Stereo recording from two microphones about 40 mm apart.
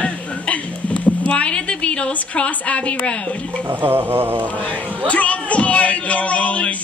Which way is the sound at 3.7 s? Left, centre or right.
Right.